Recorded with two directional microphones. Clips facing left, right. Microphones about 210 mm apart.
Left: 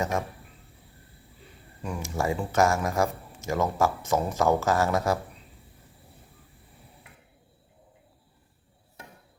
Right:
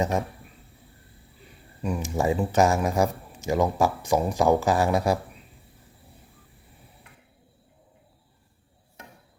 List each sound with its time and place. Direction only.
0.0 s speech: 20° right (ahead or behind)
1.8 s speech: 15° right (ahead or behind)